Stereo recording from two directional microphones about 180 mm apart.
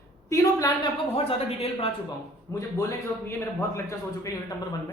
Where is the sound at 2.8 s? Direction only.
15° left (ahead or behind).